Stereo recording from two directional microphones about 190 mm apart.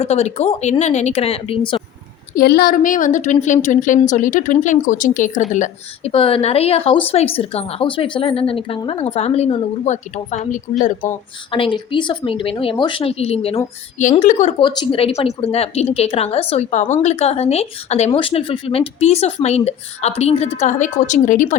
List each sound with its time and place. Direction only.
0.0 s a woman's voice: 35° left (ahead or behind)
2.3 s a woman's voice: 55° left (ahead or behind)
11.5 s a woman's voice: 25° left (ahead or behind)
14.6 s a woman's voice: 25° left (ahead or behind); by 21.5 s 40° left (ahead or behind)